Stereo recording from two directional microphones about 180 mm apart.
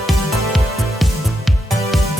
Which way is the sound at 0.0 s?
Centre (ahead or behind).